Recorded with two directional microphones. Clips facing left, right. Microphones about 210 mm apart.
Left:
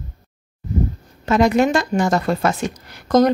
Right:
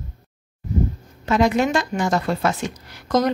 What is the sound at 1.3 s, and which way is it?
Speech, 45° left (ahead or behind).